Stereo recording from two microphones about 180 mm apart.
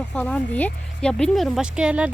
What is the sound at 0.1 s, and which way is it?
Speech, 5° left (ahead or behind).